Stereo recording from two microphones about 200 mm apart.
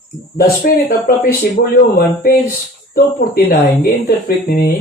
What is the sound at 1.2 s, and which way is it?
Speech, 50° left (ahead or behind).